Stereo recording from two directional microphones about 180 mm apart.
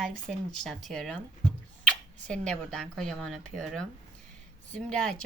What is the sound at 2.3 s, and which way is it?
A woman's voice, 5° left (ahead or behind).